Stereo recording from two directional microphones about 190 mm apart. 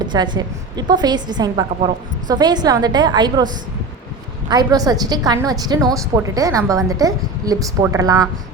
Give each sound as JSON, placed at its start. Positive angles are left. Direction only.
{"t": 0.0, "sound": "a woman's voice", "side_deg": -25}